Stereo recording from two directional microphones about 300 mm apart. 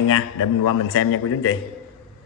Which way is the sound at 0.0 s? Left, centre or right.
Left.